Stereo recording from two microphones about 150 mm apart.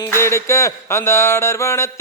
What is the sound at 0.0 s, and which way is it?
Music, 15° left (ahead or behind).